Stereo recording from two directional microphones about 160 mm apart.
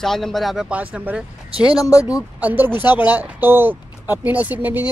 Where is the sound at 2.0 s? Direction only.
10° right (ahead or behind).